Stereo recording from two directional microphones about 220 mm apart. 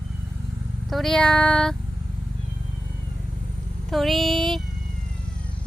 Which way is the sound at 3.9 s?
Centre (ahead or behind).